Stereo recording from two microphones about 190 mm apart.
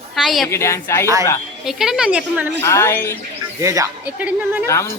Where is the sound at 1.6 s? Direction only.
Centre (ahead or behind).